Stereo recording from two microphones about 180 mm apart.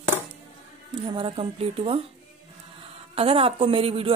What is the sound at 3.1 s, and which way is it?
Speech, 30° right (ahead or behind).